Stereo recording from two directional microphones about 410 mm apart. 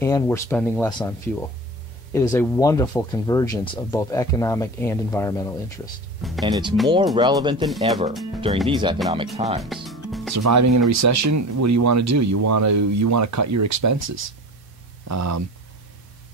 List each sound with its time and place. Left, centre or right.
0.0 s speech: centre
6.2 s speech: centre
7.6 s speech: centre
8.6 s speech: centre
9.8 s music: centre
10.3 s speech: right
15.0 s speech: right